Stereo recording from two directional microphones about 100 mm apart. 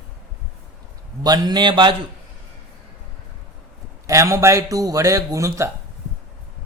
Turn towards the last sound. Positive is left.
turn(degrees=-30)  # may be behind; listen again after turning